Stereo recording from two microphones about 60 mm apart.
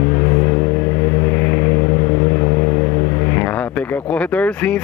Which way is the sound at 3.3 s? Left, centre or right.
Left.